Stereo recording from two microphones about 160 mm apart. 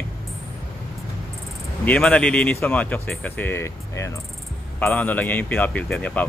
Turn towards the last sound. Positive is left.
turn(degrees=10)  # may be behind; listen again after turning